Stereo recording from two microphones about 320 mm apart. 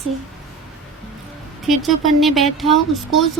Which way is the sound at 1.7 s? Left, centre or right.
Centre.